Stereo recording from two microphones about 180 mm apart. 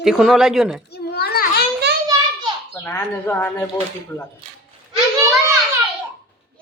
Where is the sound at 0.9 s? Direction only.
60° left (ahead or behind).